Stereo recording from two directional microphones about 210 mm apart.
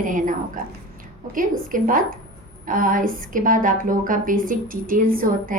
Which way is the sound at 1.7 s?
40° right (ahead or behind).